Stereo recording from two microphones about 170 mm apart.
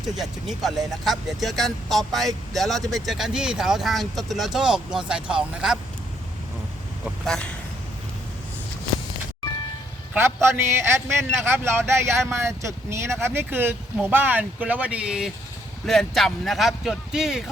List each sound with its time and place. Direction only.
0.0 s speech: centre (ahead or behind)
7.0 s speech: 5° left (ahead or behind)
10.2 s a man's voice: 15° right (ahead or behind)